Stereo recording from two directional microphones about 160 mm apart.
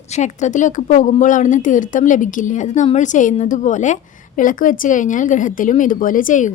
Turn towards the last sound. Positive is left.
turn(degrees=50)  # may be behind; listen again after turning